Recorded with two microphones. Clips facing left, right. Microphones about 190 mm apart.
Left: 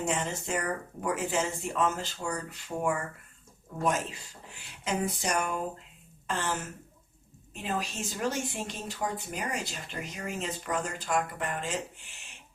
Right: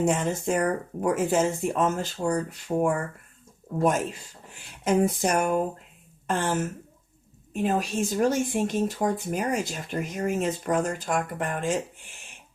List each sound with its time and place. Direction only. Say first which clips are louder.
0.0 s speech: right 7 dB; 45° right (ahead or behind)
4.5 s speech: right 9 dB; 50° right (ahead or behind)